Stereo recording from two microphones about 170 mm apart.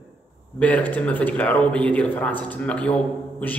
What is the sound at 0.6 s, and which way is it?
A man's voice, 10° left (ahead or behind).